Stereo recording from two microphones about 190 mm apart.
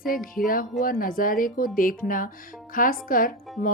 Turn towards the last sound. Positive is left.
turn(degrees=45)  # may be behind; listen again after turning